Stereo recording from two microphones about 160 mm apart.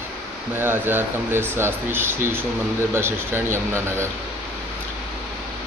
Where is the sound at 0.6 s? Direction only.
15° right (ahead or behind).